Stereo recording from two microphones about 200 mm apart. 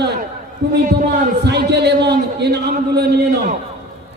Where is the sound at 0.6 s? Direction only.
55° right (ahead or behind).